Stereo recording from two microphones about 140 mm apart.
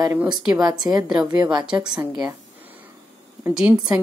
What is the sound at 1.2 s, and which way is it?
Speech, 10° right (ahead or behind).